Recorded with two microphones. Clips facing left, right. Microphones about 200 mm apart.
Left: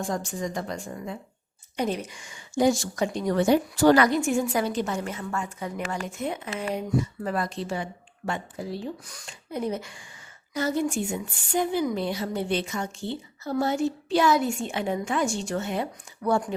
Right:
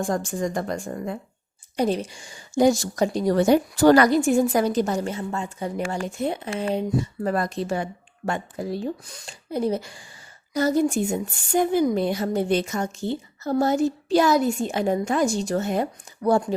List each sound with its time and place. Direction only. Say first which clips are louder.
0.0 s a woman's voice: right 5 dB; 50° right (ahead or behind)
1.7 s a woman's voice: right 5 dB; 35° right (ahead or behind)
7.3 s a woman's voice: right 4 dB; 45° right (ahead or behind)
9.0 s a woman's voice: right 5 dB; 30° right (ahead or behind)